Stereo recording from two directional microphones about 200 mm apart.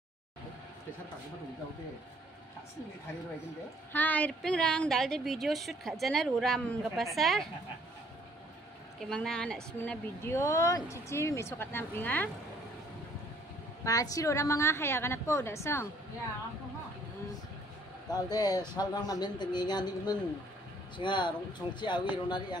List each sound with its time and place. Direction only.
3.9 s a woman's voice: 10° left (ahead or behind)
9.1 s speech: 5° left (ahead or behind)
13.8 s speech: 15° left (ahead or behind)
18.1 s a man's voice: 20° left (ahead or behind)